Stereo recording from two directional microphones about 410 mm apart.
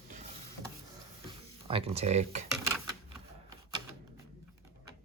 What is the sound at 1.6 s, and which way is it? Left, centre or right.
Speech, centre.